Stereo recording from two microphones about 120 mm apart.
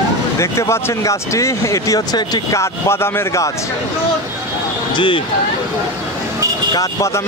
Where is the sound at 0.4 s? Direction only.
25° left (ahead or behind).